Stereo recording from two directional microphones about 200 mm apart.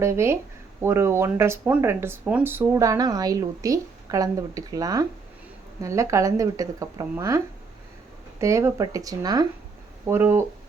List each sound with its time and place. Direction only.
0.0 s speech: 15° right (ahead or behind)